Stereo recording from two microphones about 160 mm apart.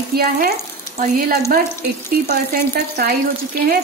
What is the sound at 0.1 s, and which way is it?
Frying, 80° right.